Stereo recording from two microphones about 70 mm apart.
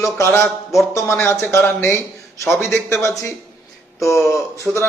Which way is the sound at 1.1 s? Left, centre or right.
Left.